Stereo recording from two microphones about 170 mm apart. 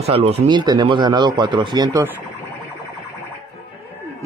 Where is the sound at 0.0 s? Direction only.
35° right (ahead or behind); by 2.1 s 20° right (ahead or behind).